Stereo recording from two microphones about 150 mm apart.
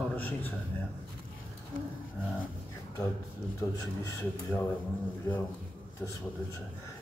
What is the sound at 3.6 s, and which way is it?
Speech, 25° left (ahead or behind).